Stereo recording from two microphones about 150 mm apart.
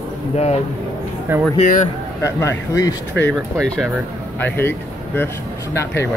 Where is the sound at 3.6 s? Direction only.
5° left (ahead or behind).